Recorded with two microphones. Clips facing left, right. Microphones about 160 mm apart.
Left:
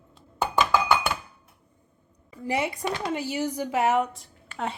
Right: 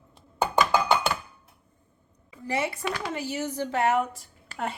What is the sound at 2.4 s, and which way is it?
A woman's voice, 15° left (ahead or behind).